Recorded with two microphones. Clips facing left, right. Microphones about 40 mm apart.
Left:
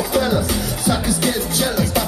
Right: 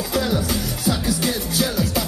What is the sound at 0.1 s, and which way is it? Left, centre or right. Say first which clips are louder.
Music: left 2 dB; centre.